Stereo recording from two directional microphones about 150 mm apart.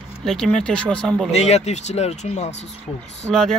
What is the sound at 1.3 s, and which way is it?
Speech, 45° left (ahead or behind).